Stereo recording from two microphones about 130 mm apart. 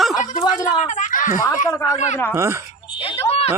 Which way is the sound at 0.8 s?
75° left (ahead or behind).